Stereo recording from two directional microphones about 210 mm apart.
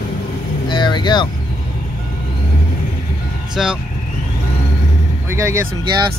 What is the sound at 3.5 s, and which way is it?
Speech, 5° right (ahead or behind).